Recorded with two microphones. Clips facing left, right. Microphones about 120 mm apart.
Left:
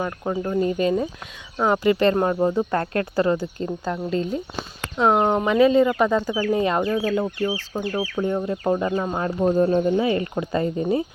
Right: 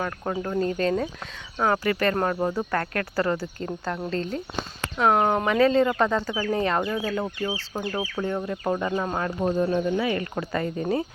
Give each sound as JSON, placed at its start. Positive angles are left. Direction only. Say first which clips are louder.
{"t": 0.0, "sound": "speech", "louder": "left 3 dB", "side_deg": 10}
{"t": 9.6, "sound": "speech", "louder": "left 5 dB", "side_deg": 40}
{"t": 10.0, "sound": "speech", "louder": "left 4 dB", "side_deg": 25}